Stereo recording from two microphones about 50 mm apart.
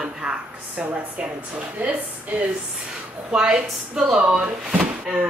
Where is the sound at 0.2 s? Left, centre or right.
Centre.